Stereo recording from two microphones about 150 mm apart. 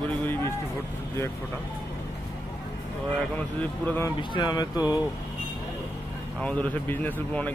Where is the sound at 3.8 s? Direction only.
15° left (ahead or behind).